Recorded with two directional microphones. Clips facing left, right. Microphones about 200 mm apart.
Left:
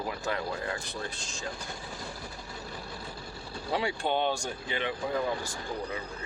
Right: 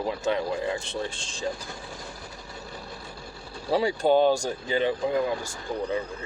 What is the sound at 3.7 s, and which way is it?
Speech, 35° right (ahead or behind).